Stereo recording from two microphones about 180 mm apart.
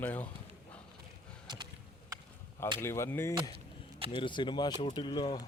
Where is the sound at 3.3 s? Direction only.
25° right (ahead or behind).